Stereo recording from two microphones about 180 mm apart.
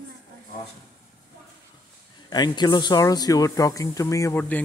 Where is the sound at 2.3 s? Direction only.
25° left (ahead or behind).